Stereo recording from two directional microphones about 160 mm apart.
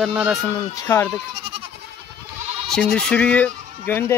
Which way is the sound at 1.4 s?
35° right (ahead or behind).